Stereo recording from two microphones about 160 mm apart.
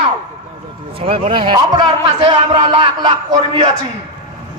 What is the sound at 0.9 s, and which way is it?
A man's voice, 35° right (ahead or behind).